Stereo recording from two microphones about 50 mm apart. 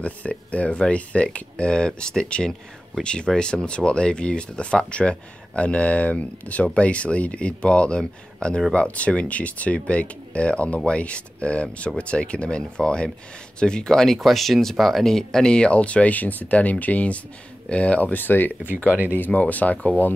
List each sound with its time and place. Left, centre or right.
0.0 s speech: left
18.9 s speech: right
19.1 s speech: left